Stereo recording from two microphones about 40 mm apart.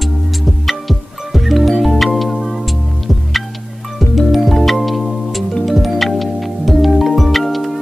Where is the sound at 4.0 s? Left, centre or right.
Centre.